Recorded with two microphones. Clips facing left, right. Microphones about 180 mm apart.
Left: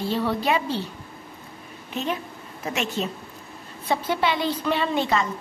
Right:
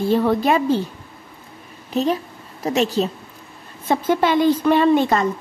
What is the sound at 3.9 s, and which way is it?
A woman's voice, 45° right (ahead or behind).